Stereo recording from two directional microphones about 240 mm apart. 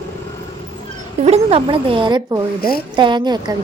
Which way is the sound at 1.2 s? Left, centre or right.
Right.